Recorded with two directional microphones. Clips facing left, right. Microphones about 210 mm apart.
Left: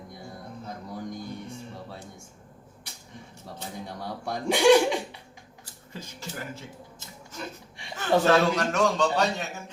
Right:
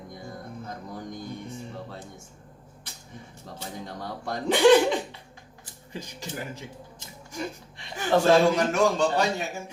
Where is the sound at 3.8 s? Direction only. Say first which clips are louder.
Even; 10° left (ahead or behind).